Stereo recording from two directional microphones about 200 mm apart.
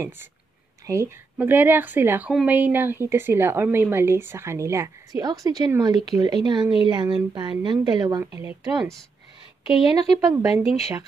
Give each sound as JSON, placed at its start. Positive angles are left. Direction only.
{"t": 0.8, "sound": "a woman's voice", "side_deg": -15}
{"t": 9.7, "sound": "a woman's voice", "side_deg": 25}
{"t": 9.9, "sound": "a woman's voice", "side_deg": -15}